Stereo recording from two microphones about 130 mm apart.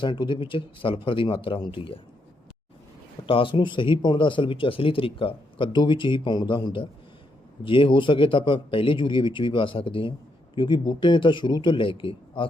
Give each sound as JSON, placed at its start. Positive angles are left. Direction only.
{"t": 0.0, "sound": "a man's voice", "side_deg": 35}
{"t": 3.2, "sound": "a man's voice", "side_deg": 40}